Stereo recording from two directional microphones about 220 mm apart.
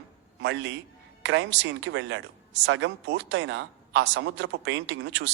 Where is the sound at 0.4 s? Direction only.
55° right (ahead or behind).